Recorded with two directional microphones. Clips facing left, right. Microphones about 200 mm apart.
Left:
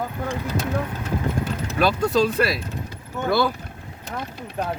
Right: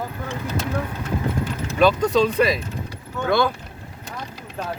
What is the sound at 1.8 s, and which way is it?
Speech, 10° left (ahead or behind).